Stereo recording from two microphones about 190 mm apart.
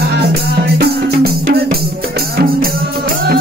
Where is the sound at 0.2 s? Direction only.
55° right (ahead or behind).